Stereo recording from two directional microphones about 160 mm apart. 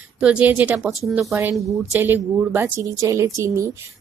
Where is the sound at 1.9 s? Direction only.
10° right (ahead or behind).